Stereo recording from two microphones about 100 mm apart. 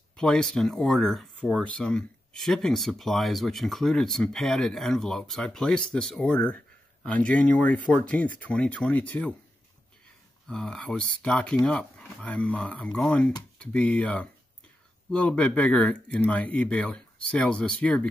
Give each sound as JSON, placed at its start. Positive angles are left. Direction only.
{"t": 0.1, "sound": "speech", "side_deg": 5}
{"t": 10.5, "sound": "speech", "side_deg": 10}